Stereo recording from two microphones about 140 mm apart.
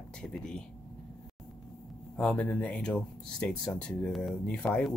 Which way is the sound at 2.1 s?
10° left (ahead or behind).